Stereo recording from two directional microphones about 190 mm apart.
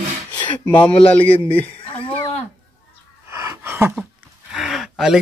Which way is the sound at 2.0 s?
30° left (ahead or behind).